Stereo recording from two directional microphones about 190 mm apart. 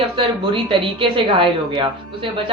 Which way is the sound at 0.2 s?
25° right (ahead or behind).